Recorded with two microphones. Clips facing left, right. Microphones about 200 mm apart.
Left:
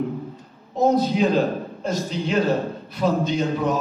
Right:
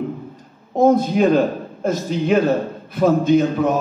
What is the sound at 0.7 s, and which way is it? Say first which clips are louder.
A man's voice: right 4 dB; 50° right (ahead or behind).